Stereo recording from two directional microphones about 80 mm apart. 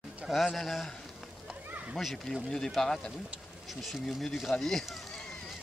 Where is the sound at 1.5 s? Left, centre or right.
Centre.